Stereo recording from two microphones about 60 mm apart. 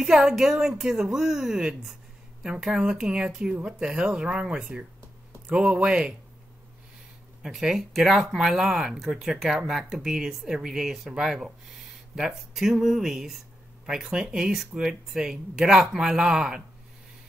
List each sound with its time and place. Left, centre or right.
0.0 s speech: centre
7.4 s speech: centre